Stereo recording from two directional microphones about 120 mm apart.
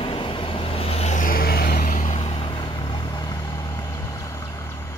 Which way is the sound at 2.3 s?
45° left (ahead or behind).